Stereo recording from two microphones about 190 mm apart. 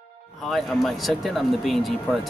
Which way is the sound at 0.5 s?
Centre (ahead or behind).